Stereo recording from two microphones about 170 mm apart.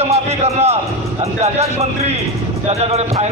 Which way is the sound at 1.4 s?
40° right (ahead or behind).